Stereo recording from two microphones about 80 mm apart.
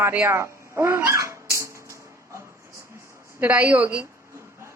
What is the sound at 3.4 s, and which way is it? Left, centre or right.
Speech, centre.